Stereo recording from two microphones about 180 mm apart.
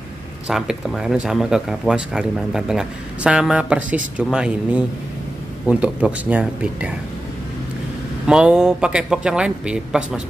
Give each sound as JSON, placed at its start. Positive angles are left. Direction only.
{"t": 0.5, "sound": "speech", "side_deg": 0}
{"t": 8.3, "sound": "speech", "side_deg": -5}